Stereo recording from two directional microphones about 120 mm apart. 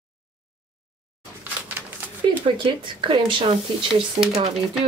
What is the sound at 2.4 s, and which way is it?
Speech, 45° right (ahead or behind).